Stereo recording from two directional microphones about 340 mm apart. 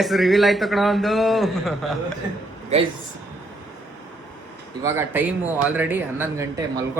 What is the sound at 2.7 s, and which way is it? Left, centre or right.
Speech, centre.